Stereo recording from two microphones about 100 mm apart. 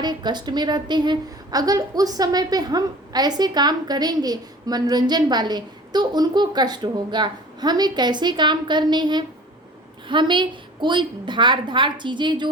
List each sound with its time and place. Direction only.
0.0 s a woman's voice: 45° right (ahead or behind)